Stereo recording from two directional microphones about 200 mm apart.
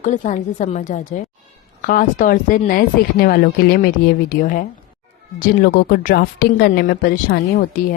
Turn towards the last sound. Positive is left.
turn(degrees=45)  # may be behind; listen again after turning